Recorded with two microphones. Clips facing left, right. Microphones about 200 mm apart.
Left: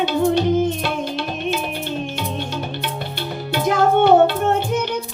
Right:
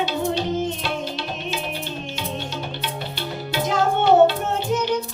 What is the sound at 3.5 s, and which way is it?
Music, 55° left (ahead or behind).